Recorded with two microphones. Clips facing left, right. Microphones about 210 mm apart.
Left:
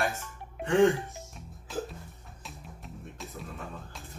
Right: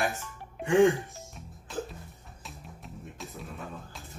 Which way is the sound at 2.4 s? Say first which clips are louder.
Even; centre (ahead or behind).